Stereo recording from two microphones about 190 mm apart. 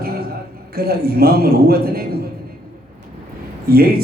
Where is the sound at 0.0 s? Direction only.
55° right (ahead or behind).